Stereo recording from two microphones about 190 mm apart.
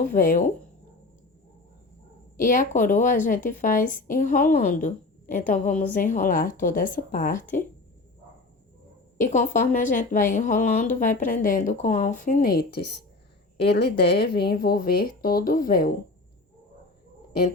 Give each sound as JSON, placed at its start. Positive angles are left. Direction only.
{"t": 0.1, "sound": "a woman's voice", "side_deg": 45}
{"t": 2.4, "sound": "a woman's voice", "side_deg": 45}
{"t": 7.3, "sound": "speech", "side_deg": 10}
{"t": 9.1, "sound": "a woman's voice", "side_deg": 45}